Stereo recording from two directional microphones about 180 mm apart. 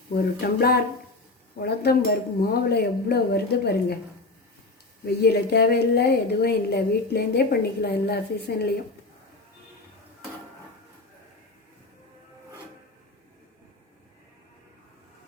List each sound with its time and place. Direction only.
0.1 s a woman's voice: 60° left (ahead or behind)
5.0 s a woman's voice: 65° left (ahead or behind)